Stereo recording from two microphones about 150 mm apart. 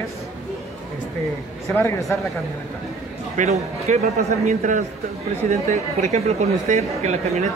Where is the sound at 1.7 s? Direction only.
20° left (ahead or behind).